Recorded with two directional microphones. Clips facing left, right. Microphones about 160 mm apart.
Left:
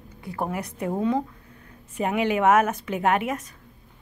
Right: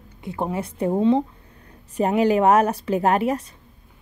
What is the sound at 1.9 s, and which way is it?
A woman's voice, 35° right (ahead or behind).